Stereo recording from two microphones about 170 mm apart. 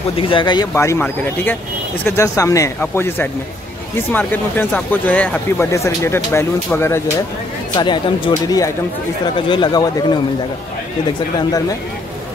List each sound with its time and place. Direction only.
0.2 s speech: 30° left (ahead or behind)
7.7 s speech: 25° left (ahead or behind)